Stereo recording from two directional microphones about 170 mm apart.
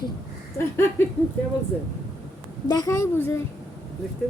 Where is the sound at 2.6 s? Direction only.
20° left (ahead or behind).